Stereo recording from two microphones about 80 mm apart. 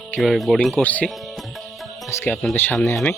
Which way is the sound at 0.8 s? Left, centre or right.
Centre.